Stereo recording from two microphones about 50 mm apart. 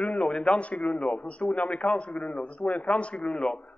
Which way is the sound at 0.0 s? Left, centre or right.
Left.